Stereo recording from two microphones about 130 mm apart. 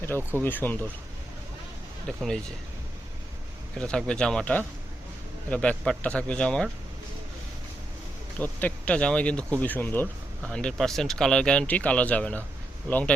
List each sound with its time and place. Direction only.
0.2 s speech: 15° right (ahead or behind)
0.4 s speech: 15° left (ahead or behind)
2.0 s speech: 5° left (ahead or behind)
3.8 s speech: 5° left (ahead or behind)
8.4 s speech: 10° left (ahead or behind)